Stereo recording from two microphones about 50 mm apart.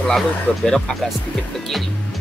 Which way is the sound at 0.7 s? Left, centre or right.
Centre.